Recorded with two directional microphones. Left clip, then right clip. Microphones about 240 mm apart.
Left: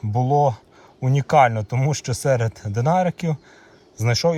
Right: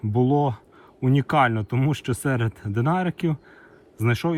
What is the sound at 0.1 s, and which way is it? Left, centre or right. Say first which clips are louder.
Speech: left 3 dB; centre.